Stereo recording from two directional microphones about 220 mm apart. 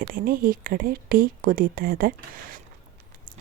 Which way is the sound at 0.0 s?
40° right (ahead or behind).